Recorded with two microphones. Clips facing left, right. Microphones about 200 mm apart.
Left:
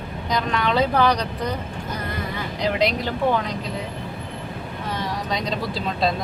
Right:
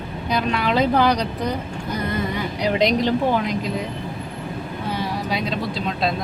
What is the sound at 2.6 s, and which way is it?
Speech, 20° right (ahead or behind).